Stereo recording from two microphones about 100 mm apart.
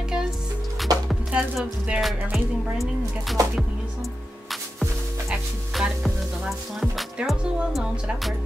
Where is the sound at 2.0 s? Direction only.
Centre (ahead or behind).